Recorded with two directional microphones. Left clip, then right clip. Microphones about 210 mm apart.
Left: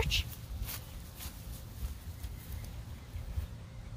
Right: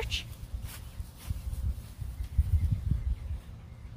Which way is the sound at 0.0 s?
30° left (ahead or behind).